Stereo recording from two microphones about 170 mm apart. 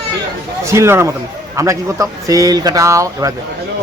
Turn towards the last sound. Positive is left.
turn(degrees=-20)  # may be behind; listen again after turning